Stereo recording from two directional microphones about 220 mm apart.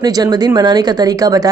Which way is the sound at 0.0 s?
15° right (ahead or behind).